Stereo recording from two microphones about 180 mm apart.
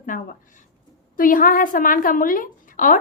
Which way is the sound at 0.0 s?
50° left (ahead or behind).